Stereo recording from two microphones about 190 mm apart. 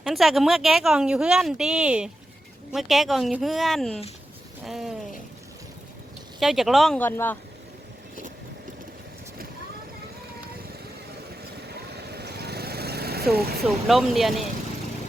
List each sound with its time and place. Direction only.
0.0 s speech: centre (ahead or behind)
6.4 s speech: centre (ahead or behind)
11.7 s vehicle: 60° right (ahead or behind)
13.8 s speech: centre (ahead or behind)